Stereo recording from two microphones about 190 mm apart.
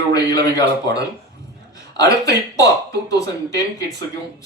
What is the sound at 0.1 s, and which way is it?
Speech, 20° left (ahead or behind).